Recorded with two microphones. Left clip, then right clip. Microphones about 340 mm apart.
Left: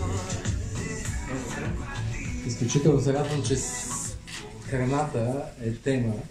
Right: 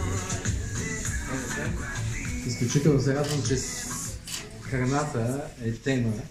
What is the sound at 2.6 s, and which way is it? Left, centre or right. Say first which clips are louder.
Speech: left 2 dB; centre.